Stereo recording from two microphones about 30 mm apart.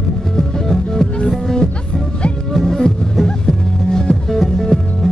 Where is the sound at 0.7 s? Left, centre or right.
Centre.